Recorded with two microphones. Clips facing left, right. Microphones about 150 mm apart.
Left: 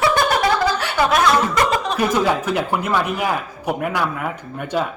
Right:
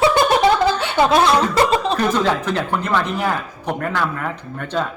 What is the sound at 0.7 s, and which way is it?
Chuckle, 25° right (ahead or behind).